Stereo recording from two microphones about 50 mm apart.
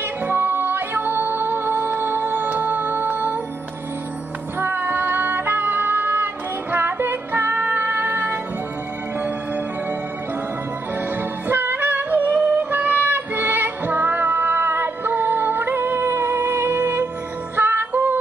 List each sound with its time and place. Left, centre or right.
0.2 s music: right
4.6 s music: right
11.1 s music: right